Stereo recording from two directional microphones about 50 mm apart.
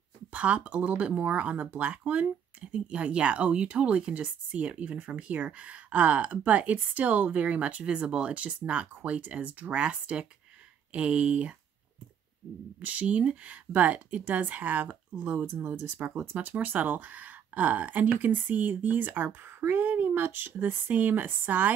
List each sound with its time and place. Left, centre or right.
0.3 s speech: right
12.8 s speech: right
15.6 s speech: right
16.4 s speech: right
19.7 s a sound: right
20.2 s speech: right